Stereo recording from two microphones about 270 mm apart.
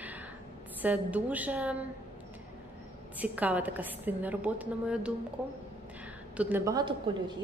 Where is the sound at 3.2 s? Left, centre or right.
Centre.